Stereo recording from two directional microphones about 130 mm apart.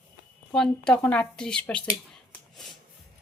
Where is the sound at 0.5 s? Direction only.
5° left (ahead or behind).